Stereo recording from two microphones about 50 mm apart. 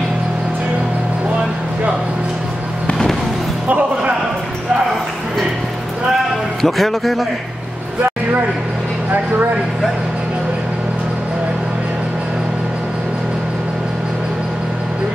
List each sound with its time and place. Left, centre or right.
3.6 s music: right
6.6 s speech: centre